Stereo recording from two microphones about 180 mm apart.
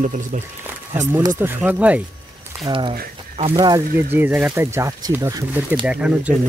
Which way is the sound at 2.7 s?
30° right (ahead or behind).